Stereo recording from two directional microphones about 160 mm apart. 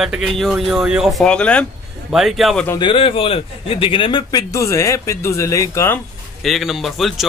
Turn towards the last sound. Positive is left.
turn(degrees=0)  # may be behind; listen again after turning